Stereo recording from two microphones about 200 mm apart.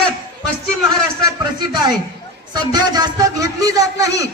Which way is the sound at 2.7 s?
20° right (ahead or behind).